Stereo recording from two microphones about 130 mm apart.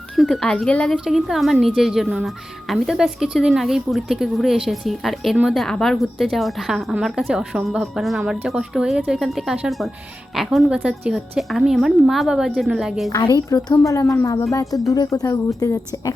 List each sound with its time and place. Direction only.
0.2 s speech: 5° left (ahead or behind)
0.9 s speech: 5° right (ahead or behind)
13.1 s a woman's voice: 30° left (ahead or behind)